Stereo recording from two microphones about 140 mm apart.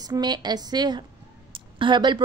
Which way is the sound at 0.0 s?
30° right (ahead or behind).